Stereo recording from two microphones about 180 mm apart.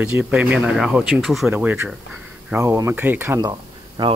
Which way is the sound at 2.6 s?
15° right (ahead or behind).